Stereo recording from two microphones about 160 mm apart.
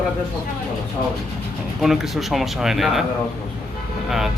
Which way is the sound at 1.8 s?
Centre (ahead or behind).